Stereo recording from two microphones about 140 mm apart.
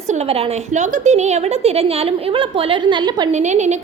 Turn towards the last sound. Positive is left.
turn(degrees=-55)  # may be behind; listen again after turning